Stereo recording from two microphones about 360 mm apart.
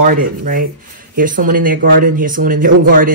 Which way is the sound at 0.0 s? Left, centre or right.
Right.